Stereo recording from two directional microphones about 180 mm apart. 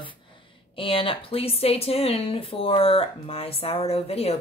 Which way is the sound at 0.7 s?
30° left (ahead or behind).